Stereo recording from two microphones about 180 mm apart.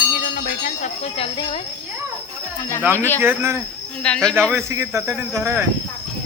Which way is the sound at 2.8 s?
15° right (ahead or behind).